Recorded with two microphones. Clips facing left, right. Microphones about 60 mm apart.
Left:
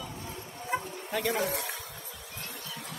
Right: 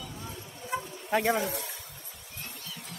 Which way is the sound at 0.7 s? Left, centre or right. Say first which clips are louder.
Left 1 dB; left.